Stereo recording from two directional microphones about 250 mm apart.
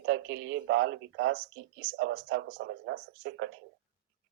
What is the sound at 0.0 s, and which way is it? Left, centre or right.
Speech, right.